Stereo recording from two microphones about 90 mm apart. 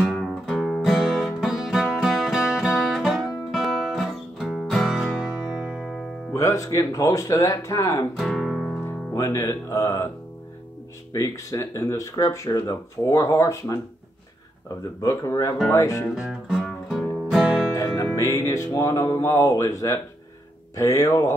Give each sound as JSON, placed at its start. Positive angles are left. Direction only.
{"t": 0.0, "sound": "music", "side_deg": 0}
{"t": 6.3, "sound": "speech", "side_deg": 35}
{"t": 8.2, "sound": "music", "side_deg": 5}
{"t": 9.1, "sound": "speech", "side_deg": 35}
{"t": 11.1, "sound": "speech", "side_deg": 35}
{"t": 15.0, "sound": "speech", "side_deg": 35}
{"t": 16.2, "sound": "music", "side_deg": -5}
{"t": 17.7, "sound": "music", "side_deg": 35}
{"t": 18.7, "sound": "speech", "side_deg": 35}